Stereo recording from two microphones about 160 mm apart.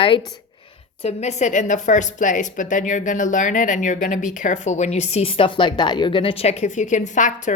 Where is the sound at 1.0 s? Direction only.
45° left (ahead or behind).